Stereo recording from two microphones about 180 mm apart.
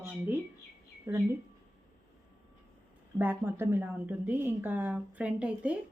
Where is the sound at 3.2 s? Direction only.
10° right (ahead or behind).